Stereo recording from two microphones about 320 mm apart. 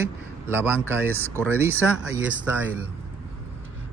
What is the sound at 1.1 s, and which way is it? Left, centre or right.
Speech, centre.